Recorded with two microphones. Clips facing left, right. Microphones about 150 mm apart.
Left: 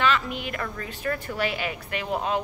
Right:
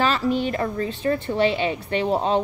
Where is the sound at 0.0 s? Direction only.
35° right (ahead or behind).